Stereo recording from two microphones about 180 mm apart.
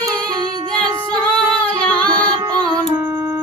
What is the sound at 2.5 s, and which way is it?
Music, 25° right (ahead or behind).